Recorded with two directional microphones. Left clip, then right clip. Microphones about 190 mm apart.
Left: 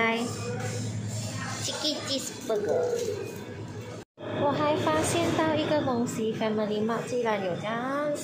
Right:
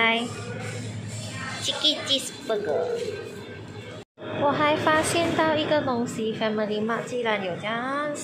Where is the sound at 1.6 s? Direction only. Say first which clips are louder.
Right 7 dB; 5° left (ahead or behind).